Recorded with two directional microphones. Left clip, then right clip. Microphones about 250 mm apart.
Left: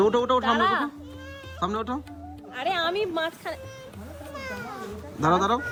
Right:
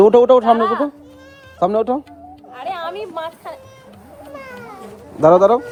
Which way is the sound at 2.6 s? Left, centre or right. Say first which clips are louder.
Even; left.